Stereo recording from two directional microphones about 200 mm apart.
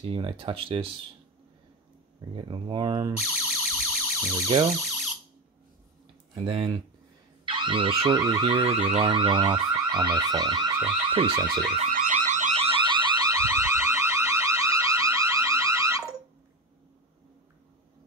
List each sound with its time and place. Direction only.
0.0 s car alarm: 25° right (ahead or behind)
2.3 s car alarm: 25° right (ahead or behind)
3.2 s music: 5° right (ahead or behind)
6.3 s car alarm: 25° right (ahead or behind)
8.7 s car alarm: 30° right (ahead or behind)
11.8 s alarm: 40° right (ahead or behind); by 16.2 s 15° right (ahead or behind)